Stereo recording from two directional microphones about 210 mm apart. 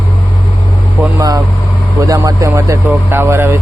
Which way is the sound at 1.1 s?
15° right (ahead or behind).